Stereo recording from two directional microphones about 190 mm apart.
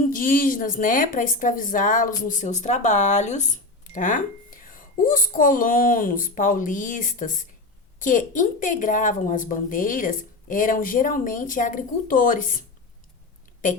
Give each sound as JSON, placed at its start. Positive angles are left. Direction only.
{"t": 0.0, "sound": "a woman's voice", "side_deg": 45}